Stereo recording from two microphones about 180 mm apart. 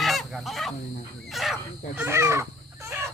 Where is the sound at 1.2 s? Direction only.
Centre (ahead or behind).